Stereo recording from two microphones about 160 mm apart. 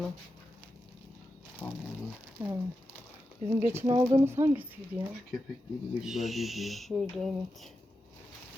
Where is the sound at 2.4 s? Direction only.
10° right (ahead or behind).